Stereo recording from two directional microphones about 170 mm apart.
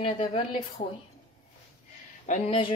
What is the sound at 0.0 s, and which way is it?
Speech, 35° left (ahead or behind).